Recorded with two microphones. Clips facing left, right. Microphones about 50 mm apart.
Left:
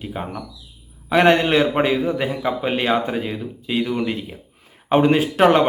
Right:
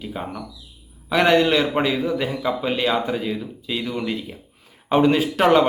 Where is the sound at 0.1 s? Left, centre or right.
Left.